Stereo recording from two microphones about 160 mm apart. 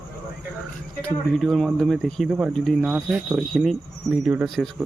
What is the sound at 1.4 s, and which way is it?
Speech, centre (ahead or behind).